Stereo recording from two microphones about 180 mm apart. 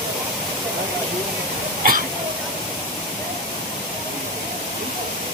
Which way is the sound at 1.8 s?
55° right (ahead or behind).